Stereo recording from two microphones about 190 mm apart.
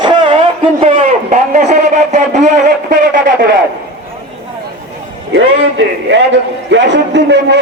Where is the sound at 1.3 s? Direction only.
40° right (ahead or behind).